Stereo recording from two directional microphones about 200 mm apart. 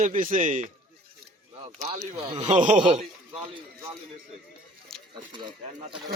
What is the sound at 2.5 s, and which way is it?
Speech, 40° right (ahead or behind).